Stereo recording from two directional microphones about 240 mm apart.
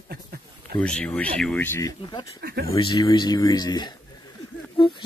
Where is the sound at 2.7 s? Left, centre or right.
Centre.